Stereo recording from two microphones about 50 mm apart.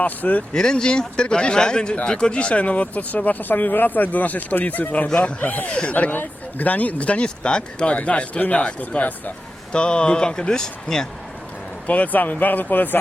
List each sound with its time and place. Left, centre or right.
0.0 s speech: left
0.5 s a man's voice: centre; by 9.3 s left
9.7 s a man's voice: centre
11.9 s speech: left